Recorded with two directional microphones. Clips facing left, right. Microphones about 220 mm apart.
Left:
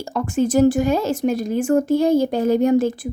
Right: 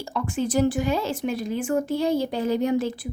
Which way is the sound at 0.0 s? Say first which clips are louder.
Left 6 dB; 45° left (ahead or behind).